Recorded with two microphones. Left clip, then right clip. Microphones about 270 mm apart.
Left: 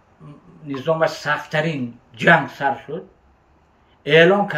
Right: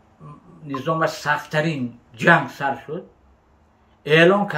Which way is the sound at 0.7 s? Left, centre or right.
Centre.